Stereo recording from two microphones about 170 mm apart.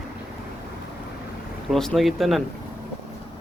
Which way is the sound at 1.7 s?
Centre (ahead or behind).